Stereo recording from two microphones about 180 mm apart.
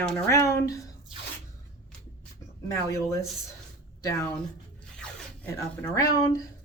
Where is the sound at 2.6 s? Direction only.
15° left (ahead or behind).